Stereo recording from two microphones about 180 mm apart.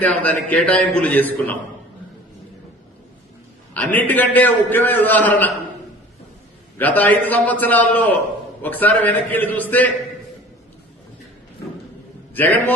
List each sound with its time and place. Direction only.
0.0 s a man's voice: 10° left (ahead or behind)
3.8 s a man's voice: 10° left (ahead or behind)
6.7 s a man's voice: 10° left (ahead or behind)
12.3 s a man's voice: 10° left (ahead or behind)